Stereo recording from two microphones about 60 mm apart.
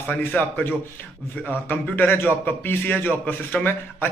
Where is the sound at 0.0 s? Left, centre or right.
Left.